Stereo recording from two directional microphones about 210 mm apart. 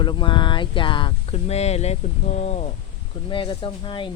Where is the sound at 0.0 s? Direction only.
20° left (ahead or behind).